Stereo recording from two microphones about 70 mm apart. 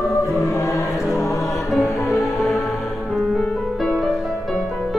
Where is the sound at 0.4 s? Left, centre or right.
Left.